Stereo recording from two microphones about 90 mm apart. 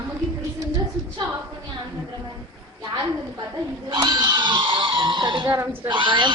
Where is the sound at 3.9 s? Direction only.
55° right (ahead or behind).